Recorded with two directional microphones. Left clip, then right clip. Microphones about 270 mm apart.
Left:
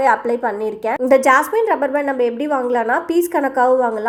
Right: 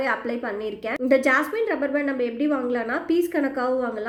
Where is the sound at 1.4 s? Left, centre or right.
Left.